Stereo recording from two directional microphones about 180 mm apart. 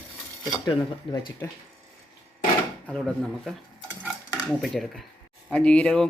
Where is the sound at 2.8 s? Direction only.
Centre (ahead or behind).